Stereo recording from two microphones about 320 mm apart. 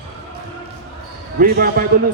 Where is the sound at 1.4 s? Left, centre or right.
Right.